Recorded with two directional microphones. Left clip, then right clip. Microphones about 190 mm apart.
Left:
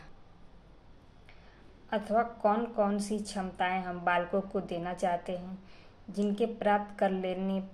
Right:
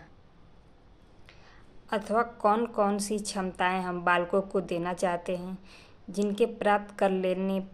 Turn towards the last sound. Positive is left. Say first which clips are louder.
# right 5 dB
turn(degrees=-35)  # may be behind; listen again after turning